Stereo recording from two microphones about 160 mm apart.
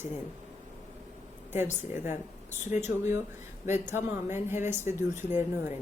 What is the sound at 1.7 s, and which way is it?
Speech, 50° left (ahead or behind).